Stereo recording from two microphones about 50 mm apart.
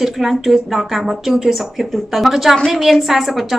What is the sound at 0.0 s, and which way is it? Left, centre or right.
A woman's voice, centre.